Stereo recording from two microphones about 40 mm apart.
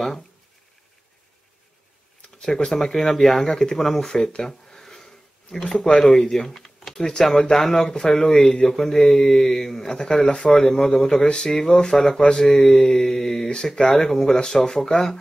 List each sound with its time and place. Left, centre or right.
2.4 s speech: centre